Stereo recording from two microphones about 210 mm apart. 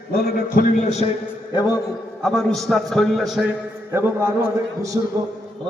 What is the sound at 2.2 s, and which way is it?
A man's voice, centre (ahead or behind).